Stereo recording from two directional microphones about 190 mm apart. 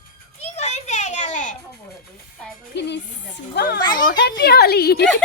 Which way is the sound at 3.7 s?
20° left (ahead or behind).